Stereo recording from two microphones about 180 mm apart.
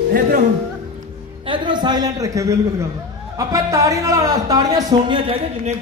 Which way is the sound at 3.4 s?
20° right (ahead or behind).